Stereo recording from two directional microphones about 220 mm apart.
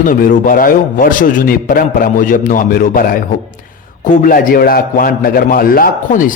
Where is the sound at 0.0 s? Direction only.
40° left (ahead or behind).